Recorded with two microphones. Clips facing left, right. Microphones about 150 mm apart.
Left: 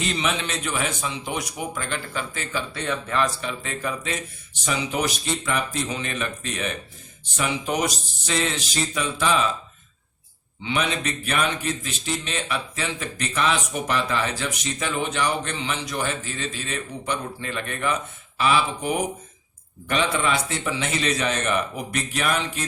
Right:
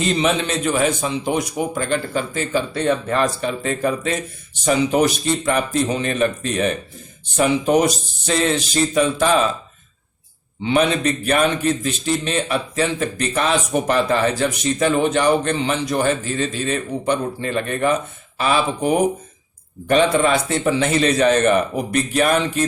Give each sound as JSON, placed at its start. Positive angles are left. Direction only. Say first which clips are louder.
{"t": 0.0, "sound": "a man's voice", "louder": "right 7 dB", "side_deg": -35}
{"t": 10.6, "sound": "a man's voice", "louder": "right 8 dB", "side_deg": -45}